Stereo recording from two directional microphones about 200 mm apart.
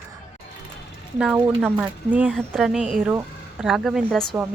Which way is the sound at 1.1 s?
5° right (ahead or behind).